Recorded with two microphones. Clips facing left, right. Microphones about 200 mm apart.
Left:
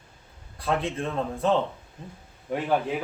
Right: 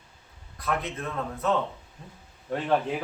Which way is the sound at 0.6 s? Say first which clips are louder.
Left 3 dB; 30° left (ahead or behind).